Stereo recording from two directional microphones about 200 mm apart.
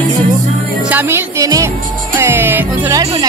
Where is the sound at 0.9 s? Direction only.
10° right (ahead or behind).